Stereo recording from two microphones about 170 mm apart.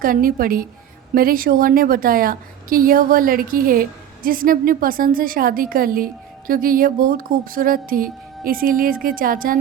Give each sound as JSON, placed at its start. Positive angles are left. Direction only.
{"t": 0.0, "sound": "a woman's voice", "side_deg": -55}